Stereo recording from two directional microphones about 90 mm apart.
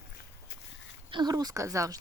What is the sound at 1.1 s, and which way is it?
Speech, 60° right (ahead or behind).